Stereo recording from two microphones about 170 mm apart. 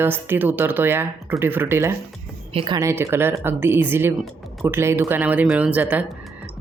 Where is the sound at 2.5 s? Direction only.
35° right (ahead or behind).